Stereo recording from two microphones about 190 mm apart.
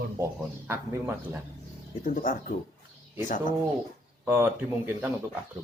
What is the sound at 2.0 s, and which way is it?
Speech, 45° left (ahead or behind).